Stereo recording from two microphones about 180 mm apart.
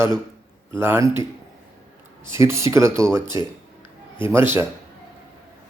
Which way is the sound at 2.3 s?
15° right (ahead or behind).